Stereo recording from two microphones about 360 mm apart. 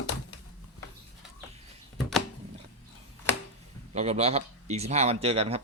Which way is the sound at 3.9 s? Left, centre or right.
Centre.